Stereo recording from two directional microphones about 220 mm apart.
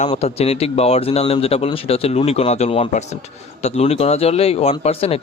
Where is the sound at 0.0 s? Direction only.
30° left (ahead or behind).